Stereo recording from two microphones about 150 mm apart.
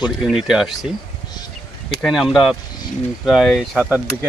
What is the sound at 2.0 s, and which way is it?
Speech, centre (ahead or behind).